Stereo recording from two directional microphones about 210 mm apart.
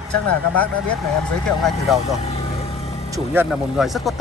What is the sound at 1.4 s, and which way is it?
Speech, centre (ahead or behind).